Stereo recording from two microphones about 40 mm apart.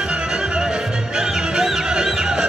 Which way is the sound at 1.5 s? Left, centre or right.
Centre.